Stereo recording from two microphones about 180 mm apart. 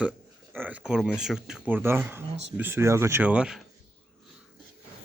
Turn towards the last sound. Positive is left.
turn(degrees=-5)  # may be behind; listen again after turning